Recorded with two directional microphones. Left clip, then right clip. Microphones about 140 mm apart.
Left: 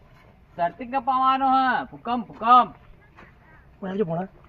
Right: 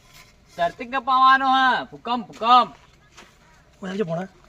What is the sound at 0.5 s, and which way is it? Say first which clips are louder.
Speech: right 1 dB; 35° right (ahead or behind).